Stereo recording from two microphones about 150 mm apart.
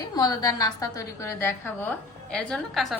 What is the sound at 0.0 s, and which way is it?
A woman's voice, 25° left (ahead or behind).